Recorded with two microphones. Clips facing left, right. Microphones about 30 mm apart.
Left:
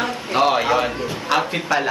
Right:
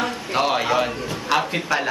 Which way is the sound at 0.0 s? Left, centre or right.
Centre.